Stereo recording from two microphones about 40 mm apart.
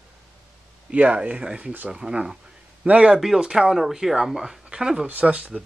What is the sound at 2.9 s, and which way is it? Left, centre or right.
Speech, right.